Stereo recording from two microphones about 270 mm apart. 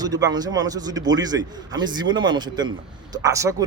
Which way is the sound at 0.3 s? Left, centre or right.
Centre.